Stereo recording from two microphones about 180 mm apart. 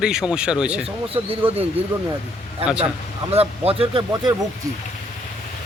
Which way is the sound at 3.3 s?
35° right (ahead or behind).